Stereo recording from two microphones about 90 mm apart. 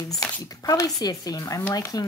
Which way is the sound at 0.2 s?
40° left (ahead or behind).